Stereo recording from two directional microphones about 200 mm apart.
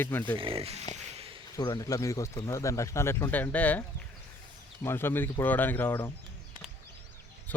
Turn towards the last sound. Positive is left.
turn(degrees=10)  # may be behind; listen again after turning